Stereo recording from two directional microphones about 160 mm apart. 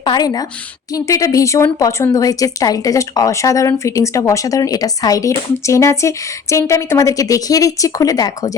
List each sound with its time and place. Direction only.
0.0 s a woman's voice: 25° left (ahead or behind)